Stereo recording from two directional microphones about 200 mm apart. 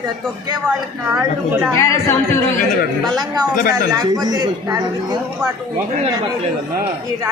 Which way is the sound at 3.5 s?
45° left (ahead or behind).